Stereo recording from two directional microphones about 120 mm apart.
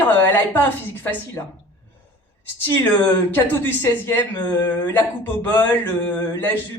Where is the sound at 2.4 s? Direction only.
15° left (ahead or behind).